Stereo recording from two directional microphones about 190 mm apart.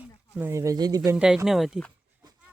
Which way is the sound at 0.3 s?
15° right (ahead or behind).